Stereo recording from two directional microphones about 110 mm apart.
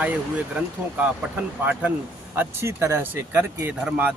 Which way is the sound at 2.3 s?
25° right (ahead or behind).